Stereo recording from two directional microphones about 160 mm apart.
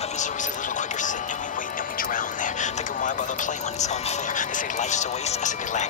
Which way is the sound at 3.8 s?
50° left (ahead or behind).